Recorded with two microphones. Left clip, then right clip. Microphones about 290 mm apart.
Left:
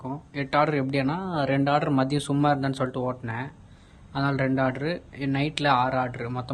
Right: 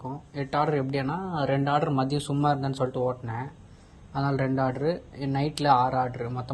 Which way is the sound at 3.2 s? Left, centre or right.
Left.